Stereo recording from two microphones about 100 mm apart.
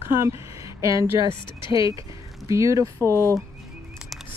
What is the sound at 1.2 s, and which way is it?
Speech, 55° left (ahead or behind).